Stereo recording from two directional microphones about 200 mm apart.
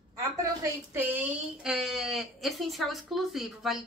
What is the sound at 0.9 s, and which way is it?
Speech, 10° right (ahead or behind).